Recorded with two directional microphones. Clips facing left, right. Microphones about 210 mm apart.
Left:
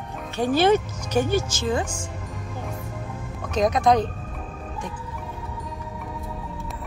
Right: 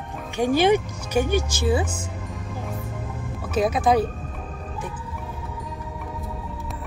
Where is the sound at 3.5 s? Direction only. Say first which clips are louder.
Even; 5° right (ahead or behind).